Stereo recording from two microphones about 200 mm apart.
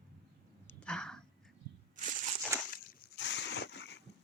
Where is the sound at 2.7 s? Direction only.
50° left (ahead or behind).